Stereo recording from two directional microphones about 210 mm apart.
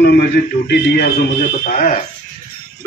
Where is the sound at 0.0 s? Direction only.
50° left (ahead or behind).